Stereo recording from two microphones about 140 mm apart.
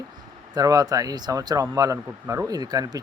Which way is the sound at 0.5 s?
25° right (ahead or behind).